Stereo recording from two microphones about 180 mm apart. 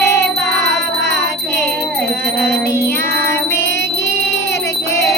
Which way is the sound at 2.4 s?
15° left (ahead or behind).